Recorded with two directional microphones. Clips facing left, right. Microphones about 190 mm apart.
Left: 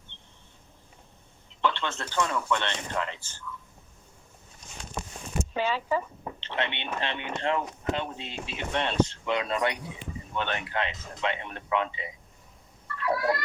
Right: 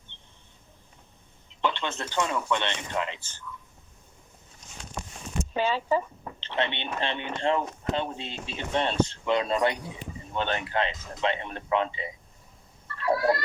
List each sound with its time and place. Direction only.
1.6 s a man's voice: 15° right (ahead or behind)
5.5 s speech: 30° right (ahead or behind)
12.9 s a sound: 30° right (ahead or behind)